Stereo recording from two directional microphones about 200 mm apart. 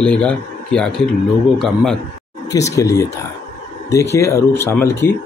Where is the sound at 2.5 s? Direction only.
15° left (ahead or behind).